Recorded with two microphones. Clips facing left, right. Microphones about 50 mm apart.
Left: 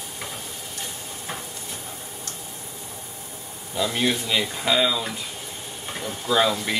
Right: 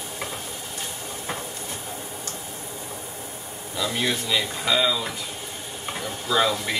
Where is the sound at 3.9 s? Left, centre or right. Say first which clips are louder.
Left 1 dB; left.